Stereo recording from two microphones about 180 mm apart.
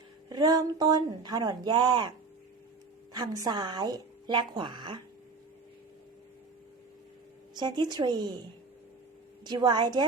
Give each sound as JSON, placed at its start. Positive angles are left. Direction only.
{"t": 0.3, "sound": "a woman's voice", "side_deg": -20}
{"t": 7.5, "sound": "a woman's voice", "side_deg": -25}
{"t": 9.4, "sound": "a woman's voice", "side_deg": -25}